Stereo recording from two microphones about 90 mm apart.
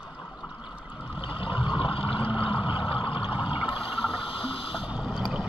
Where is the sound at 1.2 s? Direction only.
75° left (ahead or behind).